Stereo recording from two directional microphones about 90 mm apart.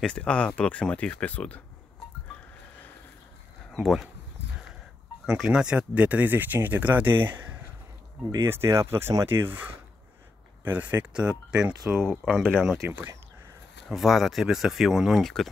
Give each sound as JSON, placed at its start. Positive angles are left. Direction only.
{"t": 0.0, "sound": "speech", "side_deg": 10}
{"t": 3.7, "sound": "speech", "side_deg": 0}
{"t": 5.2, "sound": "speech", "side_deg": -5}
{"t": 10.6, "sound": "speech", "side_deg": -20}
{"t": 12.1, "sound": "speech", "side_deg": 5}
{"t": 12.8, "sound": "speech", "side_deg": -20}
{"t": 13.8, "sound": "speech", "side_deg": 0}